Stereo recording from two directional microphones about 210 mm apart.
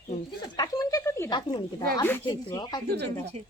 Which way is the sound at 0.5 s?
20° left (ahead or behind).